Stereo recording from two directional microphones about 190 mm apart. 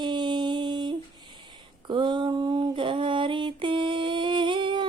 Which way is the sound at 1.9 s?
25° right (ahead or behind).